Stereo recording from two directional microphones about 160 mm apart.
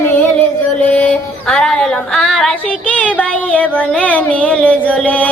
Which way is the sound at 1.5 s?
5° left (ahead or behind).